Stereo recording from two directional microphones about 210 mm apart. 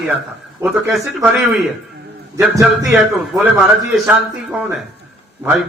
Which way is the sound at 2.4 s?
Centre (ahead or behind).